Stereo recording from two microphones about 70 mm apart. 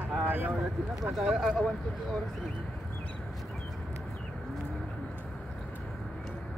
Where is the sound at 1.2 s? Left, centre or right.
Centre.